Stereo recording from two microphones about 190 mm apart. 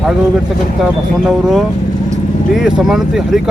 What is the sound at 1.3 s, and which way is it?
Speech, centre (ahead or behind).